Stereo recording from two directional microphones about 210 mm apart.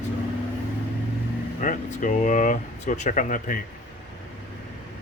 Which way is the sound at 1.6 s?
40° left (ahead or behind).